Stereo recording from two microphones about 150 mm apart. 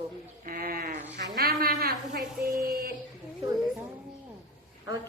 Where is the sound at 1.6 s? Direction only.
90° right.